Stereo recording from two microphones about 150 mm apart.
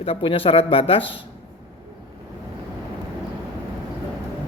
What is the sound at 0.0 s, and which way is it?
A woman's voice, 40° left (ahead or behind).